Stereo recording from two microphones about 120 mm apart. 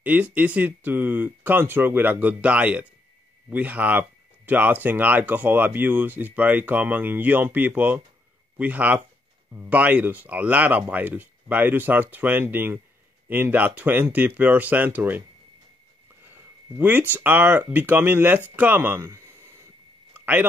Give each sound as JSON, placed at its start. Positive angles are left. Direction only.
{"t": 0.0, "sound": "speech", "side_deg": -15}
{"t": 16.7, "sound": "speech", "side_deg": -15}